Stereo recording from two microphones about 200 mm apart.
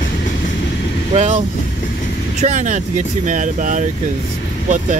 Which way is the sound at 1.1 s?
35° right (ahead or behind).